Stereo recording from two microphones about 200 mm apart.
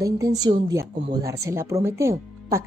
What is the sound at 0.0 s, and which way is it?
A woman's voice, 15° right (ahead or behind).